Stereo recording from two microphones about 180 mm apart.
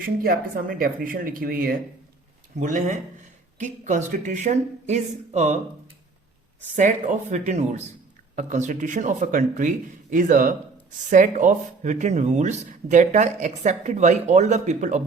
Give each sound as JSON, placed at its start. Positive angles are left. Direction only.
{"t": 0.0, "sound": "speech", "side_deg": -55}
{"t": 2.6, "sound": "speech", "side_deg": -45}
{"t": 7.1, "sound": "speech", "side_deg": -40}